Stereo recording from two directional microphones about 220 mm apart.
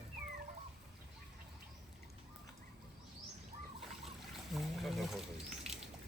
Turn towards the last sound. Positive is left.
turn(degrees=0)  # may be behind; listen again after turning